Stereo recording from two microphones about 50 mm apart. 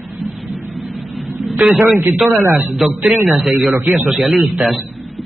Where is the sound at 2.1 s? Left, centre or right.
Centre.